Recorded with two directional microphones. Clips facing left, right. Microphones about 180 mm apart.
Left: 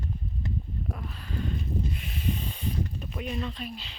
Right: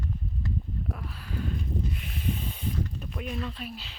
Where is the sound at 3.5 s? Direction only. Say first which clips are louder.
Left 1 dB; 5° right (ahead or behind).